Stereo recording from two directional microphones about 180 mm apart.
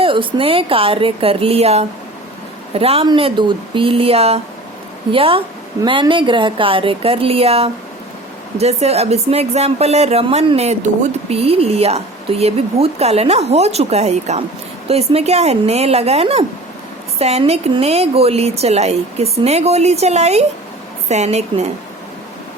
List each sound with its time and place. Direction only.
0.0 s a woman's voice: 30° right (ahead or behind)